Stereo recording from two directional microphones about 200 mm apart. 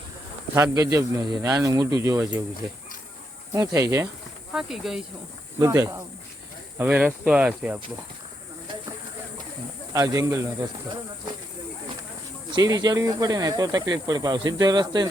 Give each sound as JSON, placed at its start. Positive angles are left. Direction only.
{"t": 0.5, "sound": "speech", "side_deg": -15}
{"t": 3.5, "sound": "speech", "side_deg": -15}
{"t": 4.5, "sound": "speech", "side_deg": 0}
{"t": 5.5, "sound": "speech", "side_deg": -15}
{"t": 9.9, "sound": "speech", "side_deg": -15}
{"t": 12.5, "sound": "speech", "side_deg": -20}